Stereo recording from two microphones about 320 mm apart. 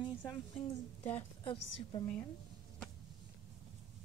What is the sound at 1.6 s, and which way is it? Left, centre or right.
Speech, left.